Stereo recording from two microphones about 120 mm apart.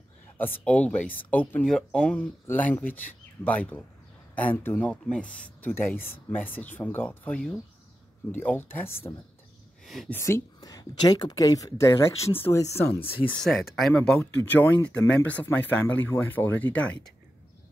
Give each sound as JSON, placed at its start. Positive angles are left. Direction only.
{"t": 0.4, "sound": "speech", "side_deg": 10}
{"t": 9.8, "sound": "speech", "side_deg": 0}
{"t": 10.1, "sound": "speech", "side_deg": 20}
{"t": 10.6, "sound": "speech", "side_deg": 35}
{"t": 13.3, "sound": "speech", "side_deg": 5}
{"t": 14.2, "sound": "speech", "side_deg": 15}